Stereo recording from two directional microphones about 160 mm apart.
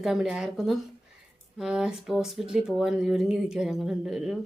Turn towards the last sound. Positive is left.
turn(degrees=-5)  # may be behind; listen again after turning